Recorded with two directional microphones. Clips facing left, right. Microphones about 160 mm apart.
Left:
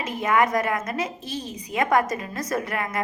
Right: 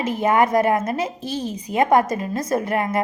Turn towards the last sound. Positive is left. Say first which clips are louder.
# right 6 dB
turn(degrees=-30)  # may be behind; listen again after turning